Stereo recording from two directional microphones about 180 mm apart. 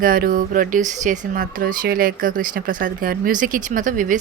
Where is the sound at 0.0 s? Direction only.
50° right (ahead or behind).